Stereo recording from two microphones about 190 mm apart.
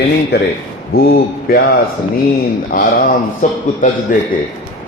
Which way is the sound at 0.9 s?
55° left (ahead or behind).